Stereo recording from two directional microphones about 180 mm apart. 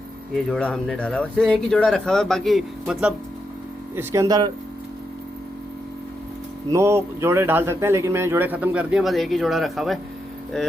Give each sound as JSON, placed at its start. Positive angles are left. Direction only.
{"t": 0.3, "sound": "speech", "side_deg": 5}
{"t": 3.9, "sound": "speech", "side_deg": -15}
{"t": 6.7, "sound": "speech", "side_deg": -15}